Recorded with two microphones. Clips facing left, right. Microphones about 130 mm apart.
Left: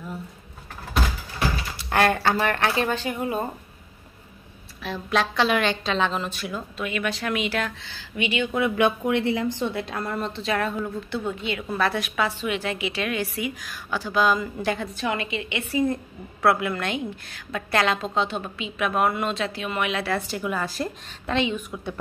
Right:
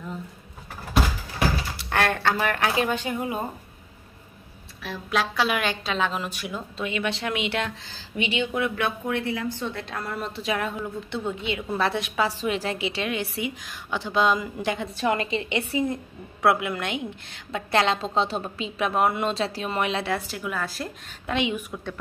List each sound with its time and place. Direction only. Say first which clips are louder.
1.8 s a woman's voice: left 5 dB; 5° left (ahead or behind); by 3.4 s 15° right (ahead or behind)
4.8 s a woman's voice: left 2 dB; 5° right (ahead or behind); by 7.7 s 25° right (ahead or behind)
7.8 s speech: left 1 dB; 35° right (ahead or behind)
8.5 s speech: left 6 dB; 5° left (ahead or behind)
8.8 s speech: left 5 dB; 20° left (ahead or behind)
9.6 s a woman's voice: left 4 dB; 10° left (ahead or behind); by 12.3 s 25° right (ahead or behind)
12.3 s a woman's voice: even; 35° right (ahead or behind); by 14.9 s 15° right (ahead or behind)
15.0 s speech: right 3 dB; 35° right (ahead or behind)
15.7 s a woman's voice: left 2 dB; 20° right (ahead or behind)
20.1 s a woman's voice: left 2 dB; 5° right (ahead or behind)
21.4 s a woman's voice: left 1 dB; 15° right (ahead or behind)